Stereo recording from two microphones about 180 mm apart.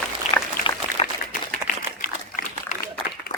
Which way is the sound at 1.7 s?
50° left (ahead or behind).